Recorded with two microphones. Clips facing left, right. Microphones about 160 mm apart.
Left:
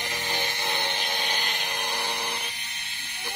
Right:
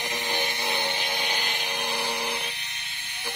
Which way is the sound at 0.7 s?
15° right (ahead or behind).